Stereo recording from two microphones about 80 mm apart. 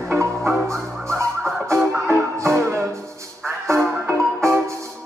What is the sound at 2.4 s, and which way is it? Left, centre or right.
Music, right.